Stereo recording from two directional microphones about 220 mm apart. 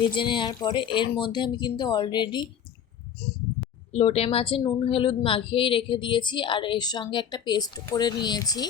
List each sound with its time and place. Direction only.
0.0 s a woman's voice: 20° left (ahead or behind)
3.9 s a woman's voice: 30° left (ahead or behind)